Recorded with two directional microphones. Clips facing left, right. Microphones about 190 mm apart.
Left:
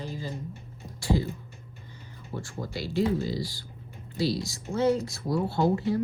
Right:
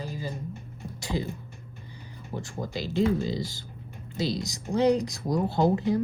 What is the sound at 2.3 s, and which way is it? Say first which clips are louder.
Speech: right 2 dB; 20° right (ahead or behind).